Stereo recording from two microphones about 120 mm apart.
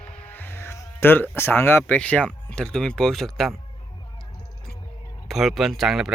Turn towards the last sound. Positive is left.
turn(degrees=0)  # may be behind; listen again after turning